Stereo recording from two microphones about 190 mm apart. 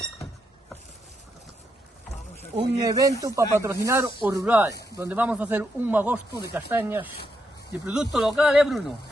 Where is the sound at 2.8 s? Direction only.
20° right (ahead or behind).